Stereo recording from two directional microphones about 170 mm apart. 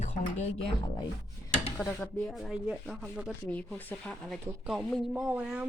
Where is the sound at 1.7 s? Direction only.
5° left (ahead or behind).